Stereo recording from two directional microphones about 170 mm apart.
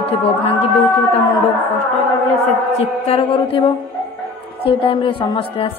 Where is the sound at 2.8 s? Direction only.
35° left (ahead or behind).